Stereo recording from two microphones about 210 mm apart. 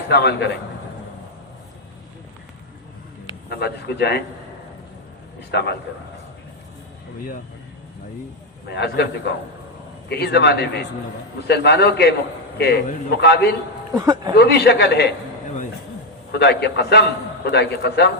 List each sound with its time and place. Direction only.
0.1 s a man's voice: 50° left (ahead or behind)
3.5 s a man's voice: 50° left (ahead or behind)
5.5 s a man's voice: 55° left (ahead or behind)
8.6 s a man's voice: 55° left (ahead or behind)
10.1 s a man's voice: 50° left (ahead or behind)
13.9 s speech: 15° right (ahead or behind)
14.3 s a man's voice: 50° left (ahead or behind)
16.3 s a man's voice: 55° left (ahead or behind)